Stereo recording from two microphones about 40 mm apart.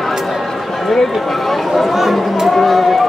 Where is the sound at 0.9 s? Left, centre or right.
Centre.